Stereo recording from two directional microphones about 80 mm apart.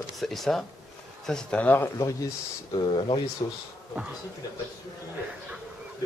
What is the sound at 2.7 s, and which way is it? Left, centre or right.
Speech, left.